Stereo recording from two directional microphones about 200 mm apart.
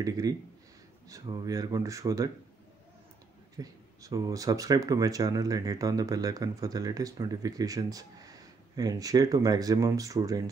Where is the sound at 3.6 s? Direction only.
15° right (ahead or behind).